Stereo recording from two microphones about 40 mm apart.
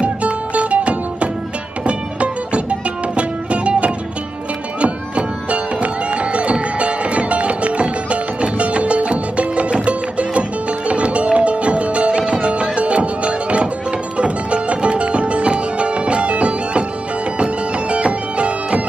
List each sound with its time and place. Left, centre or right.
0.0 s music: right